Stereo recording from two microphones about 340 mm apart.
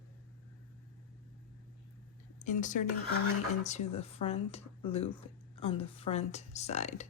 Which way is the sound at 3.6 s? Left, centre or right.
Centre.